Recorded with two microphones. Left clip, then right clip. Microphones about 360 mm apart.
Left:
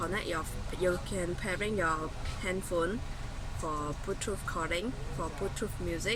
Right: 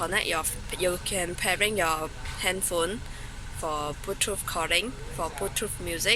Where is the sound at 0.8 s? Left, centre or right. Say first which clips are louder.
Right 4 dB; right.